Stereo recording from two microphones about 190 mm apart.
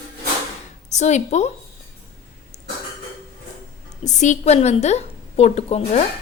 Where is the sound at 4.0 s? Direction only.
40° left (ahead or behind).